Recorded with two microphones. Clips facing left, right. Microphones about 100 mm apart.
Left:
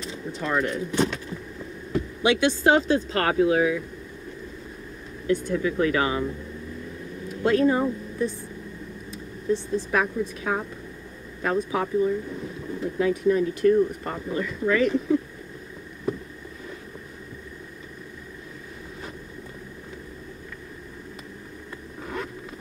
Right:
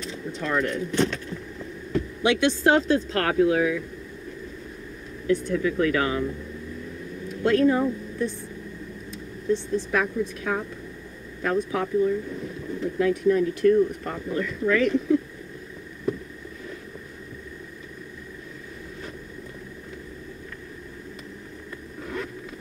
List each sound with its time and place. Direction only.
0.0 s speech: 5° left (ahead or behind)
5.2 s speech: centre (ahead or behind)
9.1 s vehicle: 5° left (ahead or behind)
9.9 s speech: 5° left (ahead or behind)
22.0 s zipper: 10° left (ahead or behind)